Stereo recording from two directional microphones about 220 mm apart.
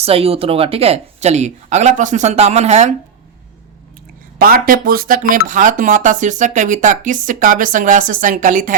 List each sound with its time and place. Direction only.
0.0 s speech: 25° right (ahead or behind)
4.4 s speech: 40° right (ahead or behind)